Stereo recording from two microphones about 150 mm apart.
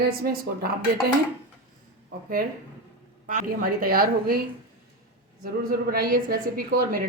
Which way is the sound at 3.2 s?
60° right (ahead or behind).